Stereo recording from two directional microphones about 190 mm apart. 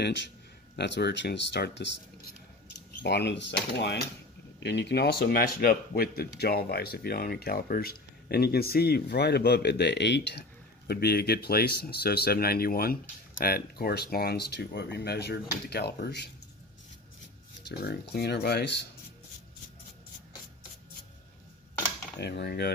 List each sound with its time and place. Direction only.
0.7 s speech: 65° left (ahead or behind)
3.0 s speech: 65° left (ahead or behind)
17.6 s speech: 60° left (ahead or behind)
22.2 s speech: 60° left (ahead or behind)